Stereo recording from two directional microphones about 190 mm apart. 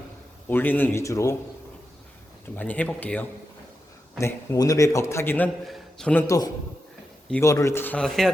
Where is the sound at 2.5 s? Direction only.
10° left (ahead or behind).